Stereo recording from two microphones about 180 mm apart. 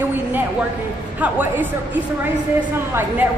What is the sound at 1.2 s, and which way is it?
Speech, 10° right (ahead or behind).